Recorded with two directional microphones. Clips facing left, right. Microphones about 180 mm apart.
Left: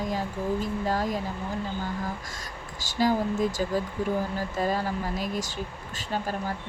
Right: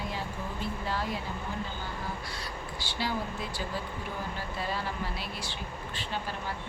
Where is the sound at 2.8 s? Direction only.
45° left (ahead or behind).